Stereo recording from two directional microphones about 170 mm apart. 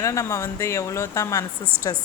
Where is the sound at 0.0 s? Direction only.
20° left (ahead or behind).